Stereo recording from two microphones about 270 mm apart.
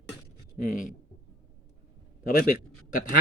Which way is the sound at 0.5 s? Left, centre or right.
Left.